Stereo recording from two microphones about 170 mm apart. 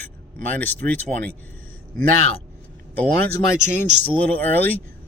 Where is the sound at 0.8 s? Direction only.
65° right (ahead or behind).